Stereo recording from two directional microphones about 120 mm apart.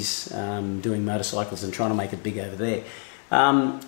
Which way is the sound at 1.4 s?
15° left (ahead or behind).